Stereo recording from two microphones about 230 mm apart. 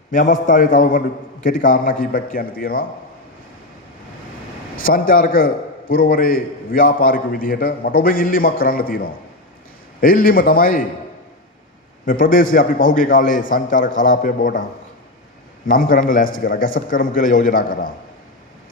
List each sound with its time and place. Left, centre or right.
0.1 s a man's voice: left
4.8 s a man's voice: left
12.0 s a man's voice: left
15.6 s a man's voice: left